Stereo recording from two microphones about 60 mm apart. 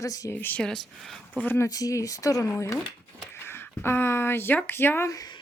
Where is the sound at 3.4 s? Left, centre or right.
Left.